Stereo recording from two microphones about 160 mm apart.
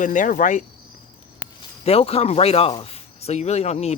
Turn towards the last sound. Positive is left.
turn(degrees=45)  # may be behind; listen again after turning